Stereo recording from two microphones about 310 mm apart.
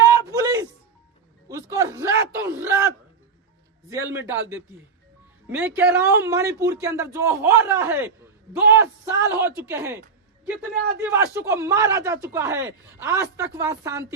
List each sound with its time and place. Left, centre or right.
0.0 s music: centre
1.5 s a sound: centre
5.5 s a man's voice: centre